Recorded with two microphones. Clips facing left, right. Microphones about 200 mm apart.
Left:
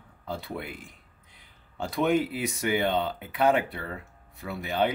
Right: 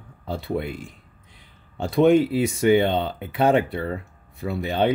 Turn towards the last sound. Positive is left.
turn(degrees=-30)  # may be behind; listen again after turning